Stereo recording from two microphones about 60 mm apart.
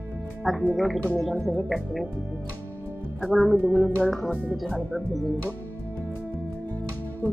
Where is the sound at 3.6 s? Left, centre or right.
Right.